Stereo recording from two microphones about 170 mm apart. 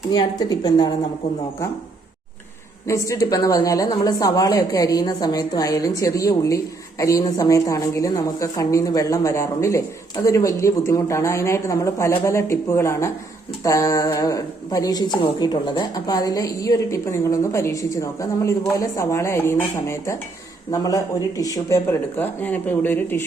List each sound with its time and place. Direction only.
0.1 s a woman's voice: 25° left (ahead or behind)
2.8 s a woman's voice: 20° left (ahead or behind)